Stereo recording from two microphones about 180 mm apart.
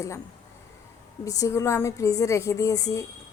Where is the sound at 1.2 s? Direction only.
20° left (ahead or behind).